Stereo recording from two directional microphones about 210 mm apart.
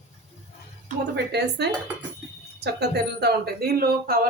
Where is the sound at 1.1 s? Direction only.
55° right (ahead or behind).